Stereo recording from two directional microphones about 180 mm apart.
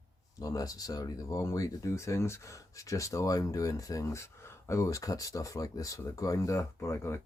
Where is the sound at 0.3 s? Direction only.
20° left (ahead or behind).